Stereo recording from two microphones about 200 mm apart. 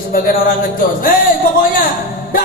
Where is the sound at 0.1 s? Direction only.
45° left (ahead or behind).